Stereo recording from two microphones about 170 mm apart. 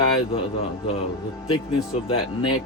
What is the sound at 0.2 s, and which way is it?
Speech, 35° left (ahead or behind).